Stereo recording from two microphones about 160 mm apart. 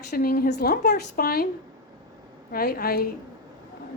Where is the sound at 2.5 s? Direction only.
70° left (ahead or behind).